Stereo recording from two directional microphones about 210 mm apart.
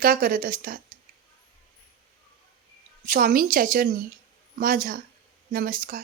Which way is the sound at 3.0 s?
40° right (ahead or behind).